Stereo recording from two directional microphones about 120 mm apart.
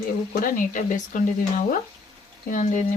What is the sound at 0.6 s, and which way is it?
Speech, 90° left.